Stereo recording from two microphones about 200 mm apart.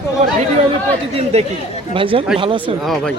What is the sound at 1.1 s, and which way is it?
Speech, 30° right (ahead or behind).